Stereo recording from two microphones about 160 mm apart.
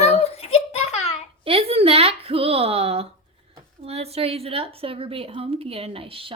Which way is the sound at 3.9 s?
40° right (ahead or behind).